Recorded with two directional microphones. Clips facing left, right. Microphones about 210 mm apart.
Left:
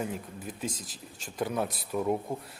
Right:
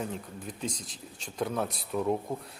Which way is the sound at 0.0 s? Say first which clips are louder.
Left 1 dB; 5° left (ahead or behind).